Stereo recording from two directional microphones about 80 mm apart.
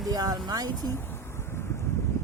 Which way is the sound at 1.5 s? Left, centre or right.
Left.